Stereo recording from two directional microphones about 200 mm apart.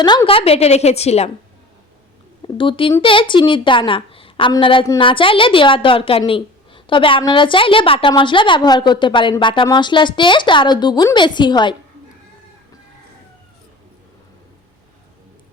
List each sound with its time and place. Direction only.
0.0 s a woman's voice: 20° left (ahead or behind)
2.4 s a woman's voice: 25° left (ahead or behind)